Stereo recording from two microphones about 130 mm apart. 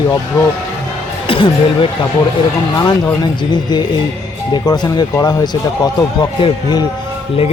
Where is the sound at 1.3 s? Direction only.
45° left (ahead or behind).